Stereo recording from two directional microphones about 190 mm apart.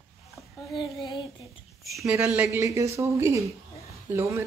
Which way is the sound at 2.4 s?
15° right (ahead or behind).